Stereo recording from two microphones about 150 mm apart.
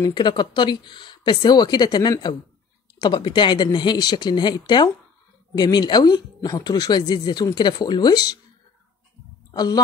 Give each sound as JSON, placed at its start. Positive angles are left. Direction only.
{"t": 0.0, "sound": "speech", "side_deg": 30}
{"t": 9.5, "sound": "a woman's voice", "side_deg": 25}